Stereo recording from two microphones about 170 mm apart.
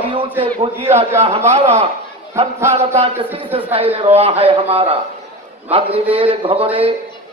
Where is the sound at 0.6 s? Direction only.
35° right (ahead or behind).